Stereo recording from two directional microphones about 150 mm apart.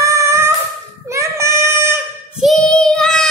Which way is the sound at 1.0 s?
20° right (ahead or behind).